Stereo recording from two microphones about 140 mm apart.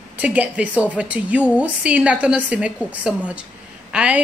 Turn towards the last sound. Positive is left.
turn(degrees=-10)  # may be behind; listen again after turning